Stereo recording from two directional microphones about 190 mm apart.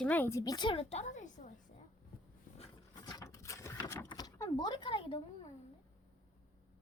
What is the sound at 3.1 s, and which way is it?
Ratchet, 15° left (ahead or behind).